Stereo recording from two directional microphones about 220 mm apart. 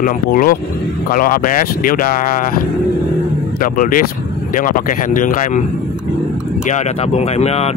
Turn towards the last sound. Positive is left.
turn(degrees=30)  # may be behind; listen again after turning